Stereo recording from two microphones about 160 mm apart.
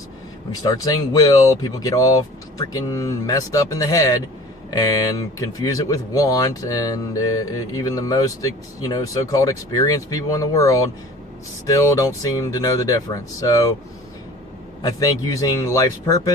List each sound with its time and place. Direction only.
0.6 s speech: 25° left (ahead or behind)
14.8 s speech: 25° left (ahead or behind)